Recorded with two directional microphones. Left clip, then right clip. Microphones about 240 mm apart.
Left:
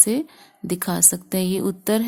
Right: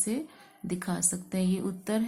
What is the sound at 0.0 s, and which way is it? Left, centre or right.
Speech, left.